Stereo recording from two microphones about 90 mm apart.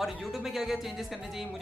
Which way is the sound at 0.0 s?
Centre (ahead or behind).